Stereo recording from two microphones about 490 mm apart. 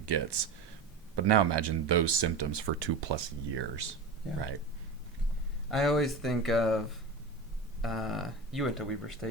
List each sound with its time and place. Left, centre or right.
0.0 s speech: right
5.7 s speech: centre